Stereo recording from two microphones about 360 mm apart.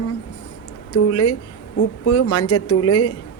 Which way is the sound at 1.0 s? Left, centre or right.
Left.